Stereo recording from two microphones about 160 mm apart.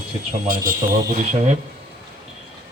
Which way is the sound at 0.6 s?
55° right (ahead or behind).